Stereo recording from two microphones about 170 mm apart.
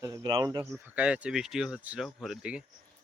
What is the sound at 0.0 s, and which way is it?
Speech, 20° right (ahead or behind).